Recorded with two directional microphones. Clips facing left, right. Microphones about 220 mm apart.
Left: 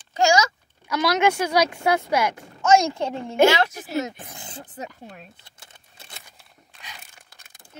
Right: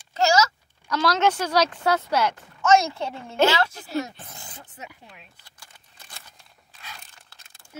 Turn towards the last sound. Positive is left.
turn(degrees=15)  # may be behind; listen again after turning